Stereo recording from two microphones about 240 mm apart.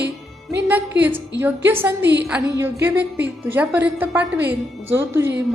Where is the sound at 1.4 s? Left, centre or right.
Centre.